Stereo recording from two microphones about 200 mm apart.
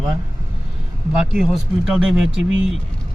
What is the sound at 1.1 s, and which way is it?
Speech, centre (ahead or behind).